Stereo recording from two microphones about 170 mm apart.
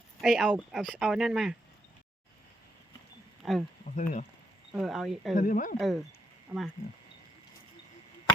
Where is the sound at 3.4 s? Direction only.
Centre (ahead or behind).